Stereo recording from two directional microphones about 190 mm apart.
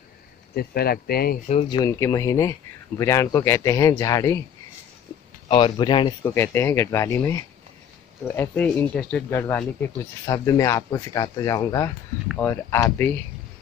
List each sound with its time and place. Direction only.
0.6 s speech: 55° left (ahead or behind)
1.5 s speech: 25° left (ahead or behind)
5.5 s speech: 25° left (ahead or behind)
6.2 s speech: 10° left (ahead or behind)